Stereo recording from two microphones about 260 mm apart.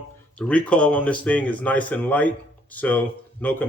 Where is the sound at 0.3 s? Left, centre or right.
Centre.